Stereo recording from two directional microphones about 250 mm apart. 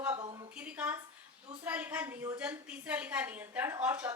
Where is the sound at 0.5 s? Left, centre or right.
Centre.